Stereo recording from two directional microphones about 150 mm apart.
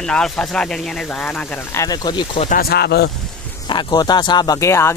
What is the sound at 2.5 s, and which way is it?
Speech, 90° left.